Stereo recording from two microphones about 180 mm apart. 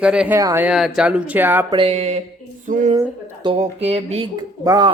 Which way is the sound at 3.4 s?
35° right (ahead or behind).